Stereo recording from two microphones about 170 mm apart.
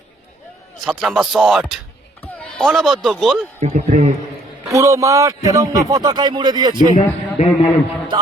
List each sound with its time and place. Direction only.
0.9 s speech: centre (ahead or behind)
3.6 s a man's voice: 40° right (ahead or behind)
3.8 s a man's voice: 50° right (ahead or behind)
4.6 s a man's voice: 20° right (ahead or behind)
6.9 s a man's voice: 40° left (ahead or behind)